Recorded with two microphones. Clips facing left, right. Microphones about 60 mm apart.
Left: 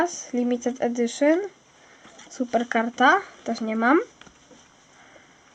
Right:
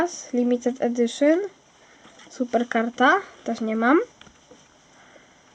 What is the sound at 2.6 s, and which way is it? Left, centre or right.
Speech, centre.